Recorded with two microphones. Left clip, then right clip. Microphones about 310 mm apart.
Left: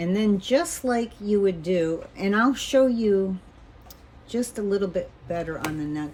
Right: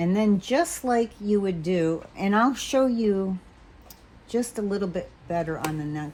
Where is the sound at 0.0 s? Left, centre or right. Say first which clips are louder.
Even; centre.